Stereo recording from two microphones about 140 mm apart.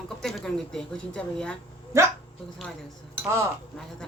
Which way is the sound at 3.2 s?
20° right (ahead or behind).